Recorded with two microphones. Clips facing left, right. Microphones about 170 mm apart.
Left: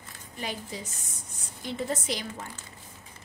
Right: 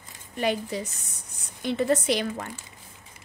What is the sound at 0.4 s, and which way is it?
A woman's voice, 65° right (ahead or behind).